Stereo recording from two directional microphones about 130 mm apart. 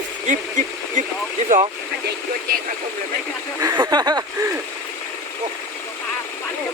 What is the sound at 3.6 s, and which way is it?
Speech, 30° right (ahead or behind).